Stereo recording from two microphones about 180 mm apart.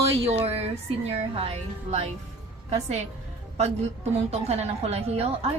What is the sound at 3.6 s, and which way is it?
A woman's voice, 35° right (ahead or behind).